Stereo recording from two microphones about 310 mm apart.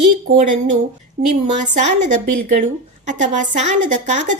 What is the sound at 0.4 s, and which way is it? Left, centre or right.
Speech, right.